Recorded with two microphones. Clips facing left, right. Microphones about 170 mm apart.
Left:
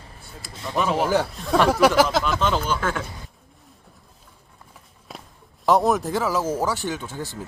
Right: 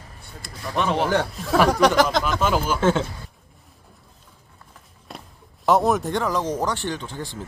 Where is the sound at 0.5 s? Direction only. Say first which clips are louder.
Even; 25° left (ahead or behind).